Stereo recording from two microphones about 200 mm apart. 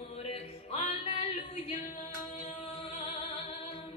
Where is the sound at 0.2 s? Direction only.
30° left (ahead or behind).